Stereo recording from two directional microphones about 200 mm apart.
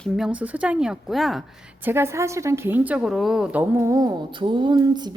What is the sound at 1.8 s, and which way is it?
A woman's voice, 10° right (ahead or behind).